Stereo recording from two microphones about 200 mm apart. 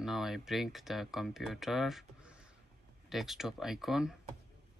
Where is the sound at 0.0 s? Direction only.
Centre (ahead or behind).